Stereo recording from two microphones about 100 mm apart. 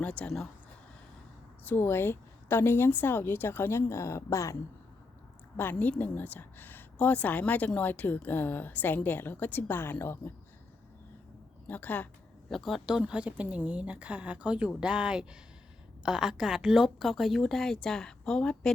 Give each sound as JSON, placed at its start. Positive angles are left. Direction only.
{"t": 0.0, "sound": "a woman's voice", "side_deg": 10}
{"t": 1.6, "sound": "a woman's voice", "side_deg": 20}
{"t": 5.5, "sound": "a woman's voice", "side_deg": 20}
{"t": 11.7, "sound": "a woman's voice", "side_deg": 20}
{"t": 12.5, "sound": "a woman's voice", "side_deg": 0}